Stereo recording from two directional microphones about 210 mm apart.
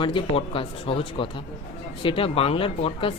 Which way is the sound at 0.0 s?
25° left (ahead or behind).